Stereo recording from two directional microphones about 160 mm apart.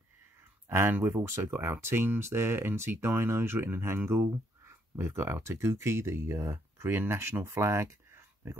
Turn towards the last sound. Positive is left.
turn(degrees=-15)  # may be behind; listen again after turning